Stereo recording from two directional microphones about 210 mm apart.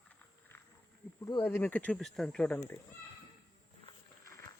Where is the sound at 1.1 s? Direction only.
20° left (ahead or behind).